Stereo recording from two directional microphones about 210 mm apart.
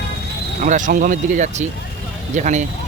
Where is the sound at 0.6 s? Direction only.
40° right (ahead or behind).